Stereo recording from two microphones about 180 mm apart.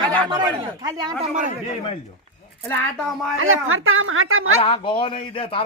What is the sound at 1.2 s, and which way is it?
Speech, 45° right (ahead or behind).